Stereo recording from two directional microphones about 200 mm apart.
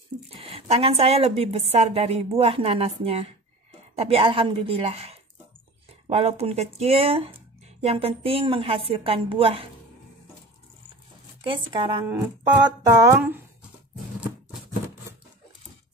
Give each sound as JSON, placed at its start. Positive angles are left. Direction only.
{"t": 0.4, "sound": "a woman's voice", "side_deg": -30}
{"t": 11.4, "sound": "speech", "side_deg": -25}